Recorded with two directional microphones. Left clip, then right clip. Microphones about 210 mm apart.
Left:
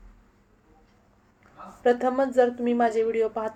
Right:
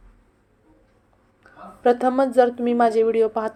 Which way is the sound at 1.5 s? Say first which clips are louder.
Right 4 dB; 20° right (ahead or behind).